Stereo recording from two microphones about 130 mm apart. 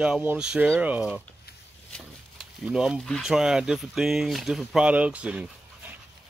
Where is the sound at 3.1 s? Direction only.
Centre (ahead or behind).